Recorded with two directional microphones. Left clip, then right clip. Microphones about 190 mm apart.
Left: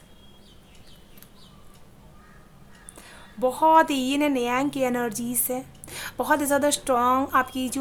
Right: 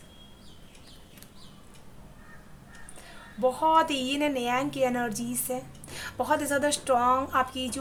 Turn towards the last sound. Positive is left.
turn(degrees=35)  # may be behind; listen again after turning